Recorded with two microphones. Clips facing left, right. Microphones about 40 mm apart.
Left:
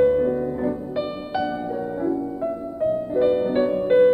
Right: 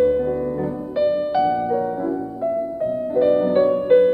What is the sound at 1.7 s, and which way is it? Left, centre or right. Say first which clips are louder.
Music: right 3 dB; centre.